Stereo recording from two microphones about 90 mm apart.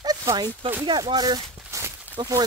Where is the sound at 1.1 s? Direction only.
50° right (ahead or behind).